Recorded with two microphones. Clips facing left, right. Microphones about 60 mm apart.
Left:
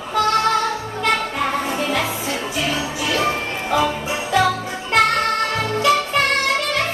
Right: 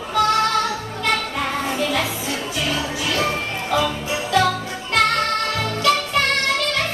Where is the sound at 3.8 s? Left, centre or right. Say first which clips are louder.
Left 2 dB; centre.